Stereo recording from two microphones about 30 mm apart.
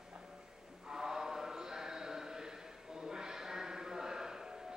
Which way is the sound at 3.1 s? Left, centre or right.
Right.